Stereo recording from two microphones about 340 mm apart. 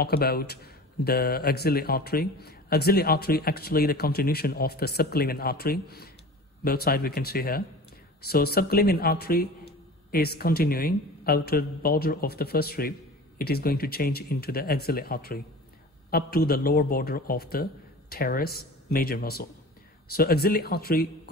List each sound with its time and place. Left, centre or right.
0.0 s speech: left